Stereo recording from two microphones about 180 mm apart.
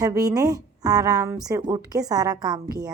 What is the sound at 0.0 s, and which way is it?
A woman's voice, 20° right (ahead or behind).